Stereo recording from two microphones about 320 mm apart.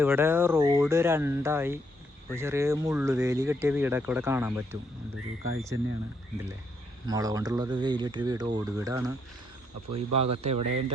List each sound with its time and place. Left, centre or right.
0.0 s speech: centre
7.1 s speech: centre